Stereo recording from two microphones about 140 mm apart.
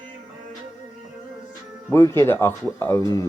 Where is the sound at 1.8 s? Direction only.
20° left (ahead or behind).